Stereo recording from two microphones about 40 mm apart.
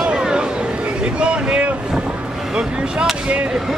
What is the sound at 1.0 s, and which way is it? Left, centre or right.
Boat, right.